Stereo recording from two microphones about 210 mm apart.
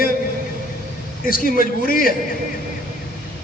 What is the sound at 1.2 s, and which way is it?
Speech, 40° left (ahead or behind).